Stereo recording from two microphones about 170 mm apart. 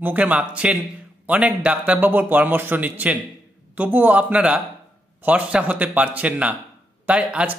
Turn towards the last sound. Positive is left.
turn(degrees=-10)  # may be behind; listen again after turning